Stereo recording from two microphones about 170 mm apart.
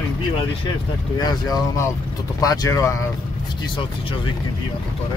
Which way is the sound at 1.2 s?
20° left (ahead or behind).